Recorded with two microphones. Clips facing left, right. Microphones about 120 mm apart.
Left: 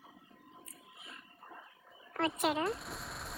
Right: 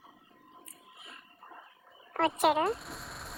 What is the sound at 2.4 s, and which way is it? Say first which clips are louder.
Speech: right 7 dB; 70° right (ahead or behind).